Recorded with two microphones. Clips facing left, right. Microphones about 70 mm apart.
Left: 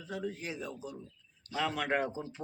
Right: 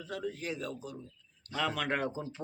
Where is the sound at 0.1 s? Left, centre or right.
Centre.